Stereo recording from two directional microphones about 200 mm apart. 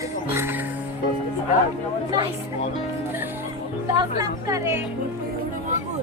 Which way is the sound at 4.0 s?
20° right (ahead or behind).